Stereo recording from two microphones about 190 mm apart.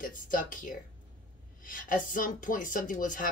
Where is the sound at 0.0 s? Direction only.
45° left (ahead or behind).